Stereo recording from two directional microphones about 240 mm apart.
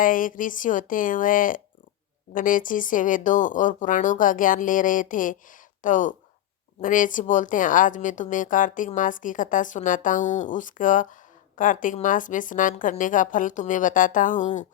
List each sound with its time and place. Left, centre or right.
0.0 s a woman's voice: left